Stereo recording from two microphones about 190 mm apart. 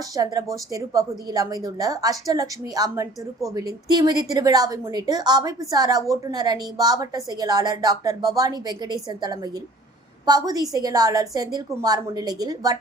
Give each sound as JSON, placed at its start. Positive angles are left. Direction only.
{"t": 0.1, "sound": "a woman's voice", "side_deg": -20}